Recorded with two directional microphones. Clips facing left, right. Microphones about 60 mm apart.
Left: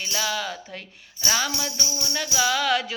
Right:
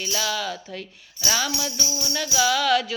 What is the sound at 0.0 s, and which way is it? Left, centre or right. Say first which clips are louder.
Music: right 1 dB; left.